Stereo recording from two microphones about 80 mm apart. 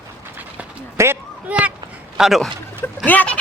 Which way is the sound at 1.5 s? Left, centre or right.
Centre.